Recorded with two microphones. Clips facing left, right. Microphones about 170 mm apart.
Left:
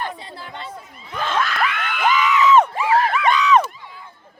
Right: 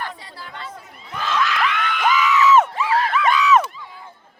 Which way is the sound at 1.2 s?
50° left (ahead or behind).